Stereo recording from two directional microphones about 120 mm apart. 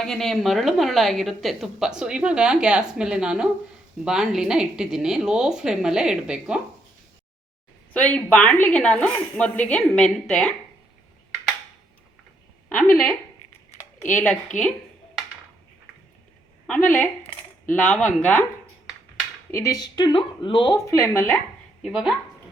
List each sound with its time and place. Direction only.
0.0 s a woman's voice: 5° left (ahead or behind)
7.9 s a woman's voice: 10° left (ahead or behind)
12.6 s a woman's voice: 10° left (ahead or behind)
16.6 s a woman's voice: 10° left (ahead or behind)
19.5 s speech: 25° left (ahead or behind)
20.1 s speech: 45° left (ahead or behind)
20.7 s speech: 25° left (ahead or behind)
21.8 s speech: 5° right (ahead or behind)